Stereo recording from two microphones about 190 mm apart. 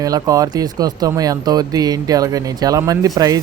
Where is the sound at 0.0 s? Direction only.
20° right (ahead or behind).